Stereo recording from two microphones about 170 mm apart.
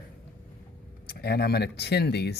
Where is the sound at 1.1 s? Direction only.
65° left (ahead or behind).